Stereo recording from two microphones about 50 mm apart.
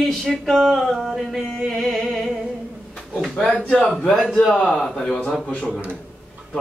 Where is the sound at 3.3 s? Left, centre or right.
Left.